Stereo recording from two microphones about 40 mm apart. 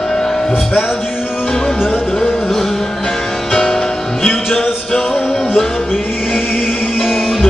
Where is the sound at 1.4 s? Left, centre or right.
Centre.